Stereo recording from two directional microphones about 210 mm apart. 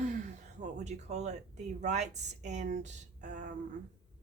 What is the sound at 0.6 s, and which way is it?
A woman's voice, 35° right (ahead or behind).